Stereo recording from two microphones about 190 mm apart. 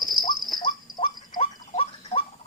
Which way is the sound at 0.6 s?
25° left (ahead or behind).